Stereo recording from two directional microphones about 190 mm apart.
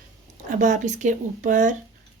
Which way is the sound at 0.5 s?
40° right (ahead or behind).